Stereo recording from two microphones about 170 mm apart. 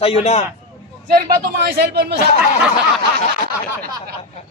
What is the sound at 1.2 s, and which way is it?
Speech, 65° right (ahead or behind).